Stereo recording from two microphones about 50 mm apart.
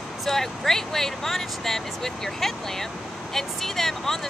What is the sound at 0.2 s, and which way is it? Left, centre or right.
Speech, centre.